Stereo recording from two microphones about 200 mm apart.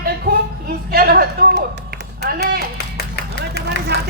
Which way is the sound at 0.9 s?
50° right (ahead or behind).